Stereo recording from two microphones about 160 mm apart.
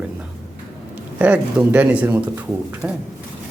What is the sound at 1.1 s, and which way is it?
A man's voice, 10° right (ahead or behind).